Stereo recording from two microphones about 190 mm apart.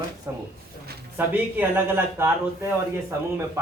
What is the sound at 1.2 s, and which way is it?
Speech, 10° right (ahead or behind).